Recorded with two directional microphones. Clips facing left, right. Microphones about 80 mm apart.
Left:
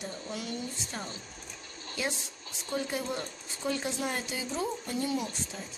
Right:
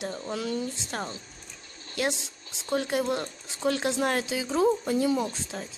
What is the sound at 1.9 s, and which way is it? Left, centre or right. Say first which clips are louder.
Speech: right 6 dB; right.